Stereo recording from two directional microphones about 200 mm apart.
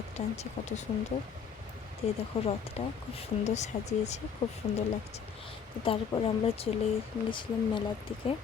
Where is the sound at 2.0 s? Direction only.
30° left (ahead or behind).